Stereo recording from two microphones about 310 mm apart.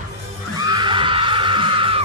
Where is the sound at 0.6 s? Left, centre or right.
Centre.